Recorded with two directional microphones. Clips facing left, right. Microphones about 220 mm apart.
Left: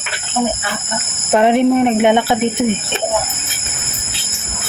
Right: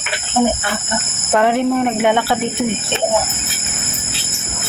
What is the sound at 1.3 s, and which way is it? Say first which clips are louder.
Speech: left 3 dB; 20° left (ahead or behind).